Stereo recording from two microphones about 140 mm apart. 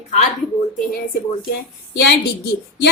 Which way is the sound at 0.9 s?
90° left.